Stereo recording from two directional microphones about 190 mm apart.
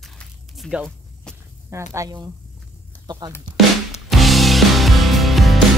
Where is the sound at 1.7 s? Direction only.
15° right (ahead or behind).